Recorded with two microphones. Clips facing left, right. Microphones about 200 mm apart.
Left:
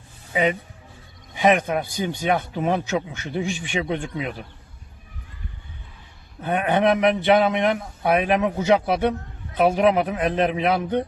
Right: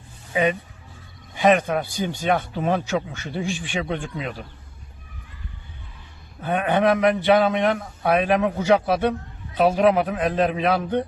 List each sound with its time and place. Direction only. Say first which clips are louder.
1.4 s a man's voice: right 1 dB; 15° left (ahead or behind)
6.4 s a man's voice: even; 20° left (ahead or behind)